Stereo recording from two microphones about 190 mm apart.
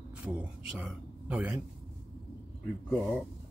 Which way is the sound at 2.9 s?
Centre (ahead or behind).